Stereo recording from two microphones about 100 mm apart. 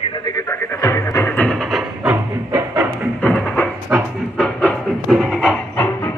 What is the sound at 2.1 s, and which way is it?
Music, 15° right (ahead or behind).